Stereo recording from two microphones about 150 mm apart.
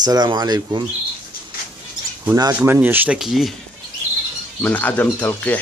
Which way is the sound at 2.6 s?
15° right (ahead or behind).